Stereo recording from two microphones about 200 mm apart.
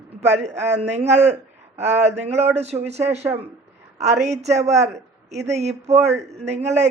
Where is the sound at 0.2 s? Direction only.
35° right (ahead or behind).